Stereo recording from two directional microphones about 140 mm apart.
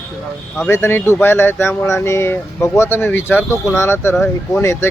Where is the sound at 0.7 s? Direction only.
15° left (ahead or behind).